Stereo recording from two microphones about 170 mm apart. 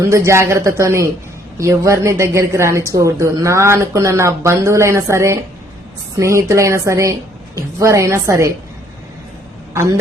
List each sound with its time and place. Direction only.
0.0 s a woman's voice: 15° right (ahead or behind)